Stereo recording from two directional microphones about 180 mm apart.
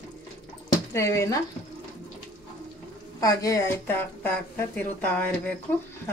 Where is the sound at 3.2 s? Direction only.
20° left (ahead or behind).